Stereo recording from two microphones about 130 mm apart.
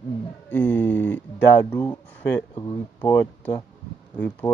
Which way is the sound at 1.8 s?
20° left (ahead or behind).